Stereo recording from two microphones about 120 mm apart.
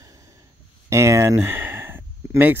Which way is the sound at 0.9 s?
25° right (ahead or behind).